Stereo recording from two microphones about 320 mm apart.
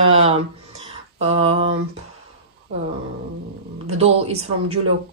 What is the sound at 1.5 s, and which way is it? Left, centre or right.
Speech, centre.